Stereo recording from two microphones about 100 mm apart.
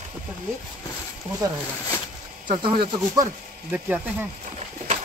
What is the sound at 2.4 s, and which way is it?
Speech, 55° right (ahead or behind).